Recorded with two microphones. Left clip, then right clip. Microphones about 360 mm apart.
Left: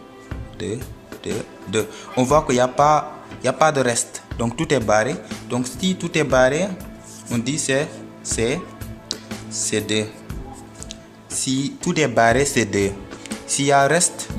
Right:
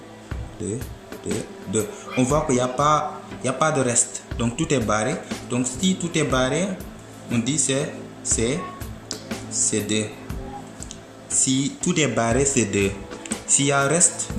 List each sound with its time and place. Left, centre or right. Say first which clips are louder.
0.8 s music: even; centre
1.7 s speech: left 3 dB; left
11.3 s speech: right 1 dB; left